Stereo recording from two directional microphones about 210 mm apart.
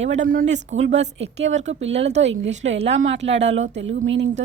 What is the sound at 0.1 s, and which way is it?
A woman's voice, 40° right (ahead or behind).